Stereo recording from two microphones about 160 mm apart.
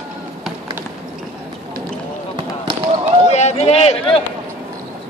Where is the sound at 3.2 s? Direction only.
45° left (ahead or behind).